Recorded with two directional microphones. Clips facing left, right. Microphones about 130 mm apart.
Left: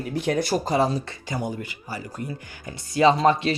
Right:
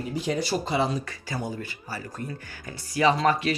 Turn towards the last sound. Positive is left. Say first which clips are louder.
# left 4 dB
turn(degrees=25)  # may be behind; listen again after turning